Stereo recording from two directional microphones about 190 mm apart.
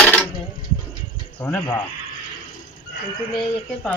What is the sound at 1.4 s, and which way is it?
Speech, 15° left (ahead or behind).